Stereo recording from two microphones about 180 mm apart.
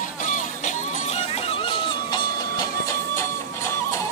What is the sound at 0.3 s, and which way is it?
Music, 45° left (ahead or behind).